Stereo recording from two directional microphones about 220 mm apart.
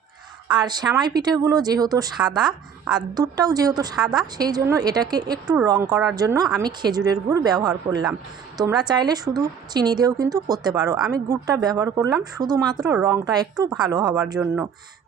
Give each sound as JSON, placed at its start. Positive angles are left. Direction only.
{"t": 0.5, "sound": "speech", "side_deg": -20}